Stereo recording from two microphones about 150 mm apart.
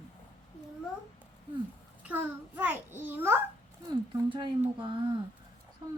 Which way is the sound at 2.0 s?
15° right (ahead or behind).